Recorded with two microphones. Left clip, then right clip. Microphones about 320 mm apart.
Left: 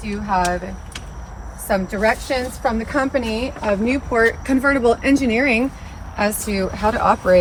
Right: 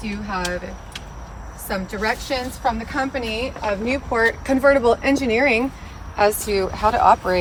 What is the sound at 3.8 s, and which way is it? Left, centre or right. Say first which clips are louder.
Speech: left 1 dB; right.